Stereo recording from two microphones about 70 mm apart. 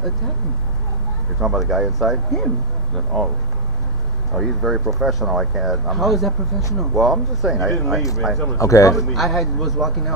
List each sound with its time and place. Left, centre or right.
1.4 s speech: centre
4.3 s speech: centre
8.5 s speech: left
8.9 s speech: centre